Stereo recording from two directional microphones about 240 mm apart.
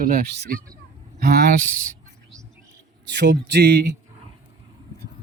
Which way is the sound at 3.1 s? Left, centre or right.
Right.